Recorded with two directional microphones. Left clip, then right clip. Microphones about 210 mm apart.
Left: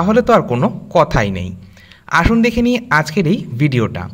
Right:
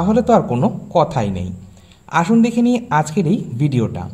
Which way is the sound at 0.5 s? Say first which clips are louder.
Left 2 dB; 50° left (ahead or behind).